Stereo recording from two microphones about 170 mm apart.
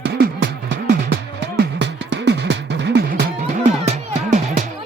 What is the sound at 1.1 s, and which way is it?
Music, 85° right.